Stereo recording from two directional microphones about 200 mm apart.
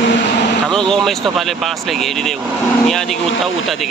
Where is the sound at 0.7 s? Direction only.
5° left (ahead or behind).